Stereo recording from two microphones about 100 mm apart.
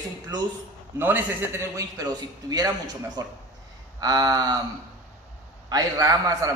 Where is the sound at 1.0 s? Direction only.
20° right (ahead or behind).